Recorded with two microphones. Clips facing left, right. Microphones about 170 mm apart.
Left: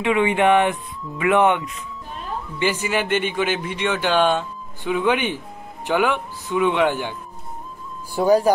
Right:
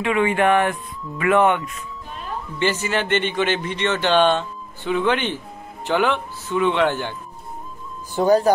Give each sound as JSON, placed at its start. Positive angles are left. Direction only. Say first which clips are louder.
{"t": 0.0, "sound": "speech", "louder": "left 1 dB", "side_deg": 15}
{"t": 2.6, "sound": "speech", "louder": "even", "side_deg": 10}
{"t": 8.2, "sound": "speech", "louder": "even", "side_deg": 10}